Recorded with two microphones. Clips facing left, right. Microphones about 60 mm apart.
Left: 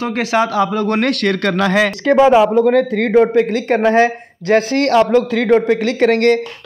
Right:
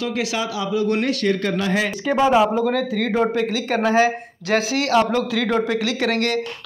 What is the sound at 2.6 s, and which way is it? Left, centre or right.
Speech, left.